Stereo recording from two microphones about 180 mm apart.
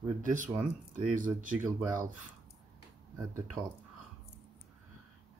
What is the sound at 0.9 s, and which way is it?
Speech, 45° right (ahead or behind).